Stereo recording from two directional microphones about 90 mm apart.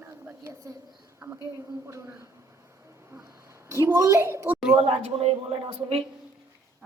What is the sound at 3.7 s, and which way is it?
Speech, 35° right (ahead or behind).